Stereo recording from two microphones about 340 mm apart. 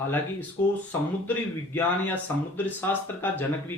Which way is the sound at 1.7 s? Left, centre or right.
Centre.